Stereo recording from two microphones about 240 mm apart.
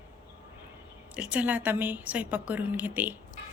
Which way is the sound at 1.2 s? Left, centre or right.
Centre.